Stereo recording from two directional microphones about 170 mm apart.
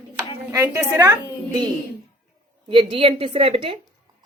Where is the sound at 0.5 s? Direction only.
15° right (ahead or behind).